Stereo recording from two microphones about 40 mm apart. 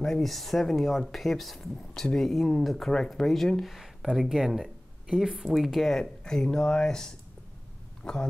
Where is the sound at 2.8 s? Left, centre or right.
Centre.